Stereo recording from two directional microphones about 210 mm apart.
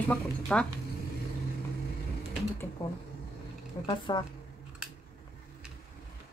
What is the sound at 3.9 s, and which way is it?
Speech, 20° left (ahead or behind).